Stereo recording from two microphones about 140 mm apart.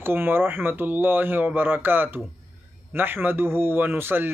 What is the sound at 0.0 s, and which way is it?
A man's voice, 15° right (ahead or behind).